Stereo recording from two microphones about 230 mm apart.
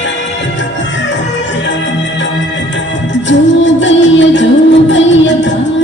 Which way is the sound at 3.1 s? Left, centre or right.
Left.